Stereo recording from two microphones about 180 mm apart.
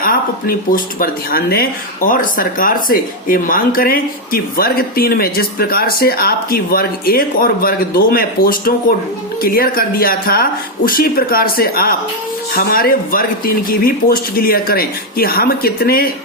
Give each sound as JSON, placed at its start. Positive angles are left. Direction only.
{"t": 0.0, "sound": "speech", "side_deg": 55}